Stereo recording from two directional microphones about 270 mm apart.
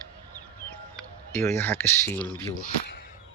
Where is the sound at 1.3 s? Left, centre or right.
Centre.